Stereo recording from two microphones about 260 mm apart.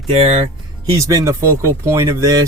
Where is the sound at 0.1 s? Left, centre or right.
Right.